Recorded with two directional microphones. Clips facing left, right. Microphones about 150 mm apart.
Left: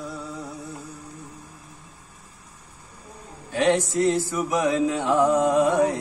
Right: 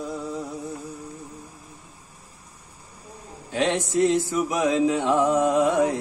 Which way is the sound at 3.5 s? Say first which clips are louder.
Left 3 dB; 20° right (ahead or behind).